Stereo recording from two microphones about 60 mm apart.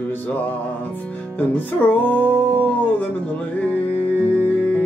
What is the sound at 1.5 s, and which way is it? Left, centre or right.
Music, left.